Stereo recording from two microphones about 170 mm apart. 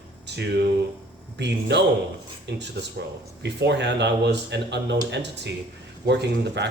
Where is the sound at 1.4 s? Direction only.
85° right.